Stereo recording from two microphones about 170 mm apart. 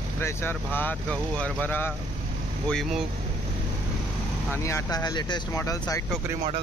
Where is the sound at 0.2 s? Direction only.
15° left (ahead or behind).